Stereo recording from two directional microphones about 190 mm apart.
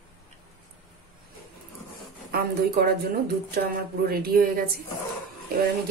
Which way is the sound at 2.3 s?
55° right (ahead or behind).